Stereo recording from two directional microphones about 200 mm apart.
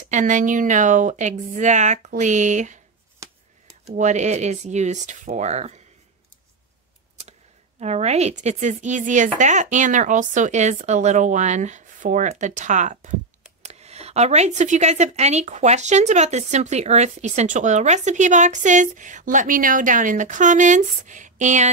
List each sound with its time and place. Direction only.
0.0 s speech: 40° right (ahead or behind)
3.9 s speech: 35° right (ahead or behind)
7.8 s speech: 35° right (ahead or behind)